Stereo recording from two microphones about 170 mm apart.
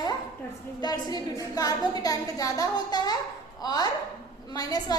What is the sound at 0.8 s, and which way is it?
A woman's voice, 20° left (ahead or behind).